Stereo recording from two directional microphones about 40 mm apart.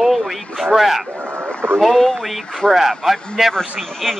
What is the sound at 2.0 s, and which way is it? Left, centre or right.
Speech, centre.